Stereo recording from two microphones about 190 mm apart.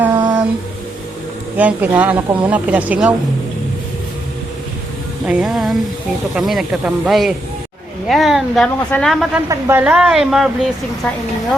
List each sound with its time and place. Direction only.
0.1 s a sound: 25° right (ahead or behind)
1.5 s speech: 10° right (ahead or behind)
5.2 s a woman's voice: 5° right (ahead or behind)
9.5 s a woman's voice: 10° right (ahead or behind)